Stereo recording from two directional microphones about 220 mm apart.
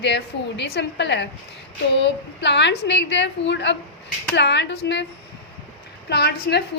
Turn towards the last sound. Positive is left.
turn(degrees=45)  # may be behind; listen again after turning